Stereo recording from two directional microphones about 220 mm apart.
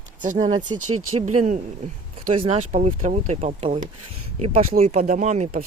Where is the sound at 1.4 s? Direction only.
35° right (ahead or behind).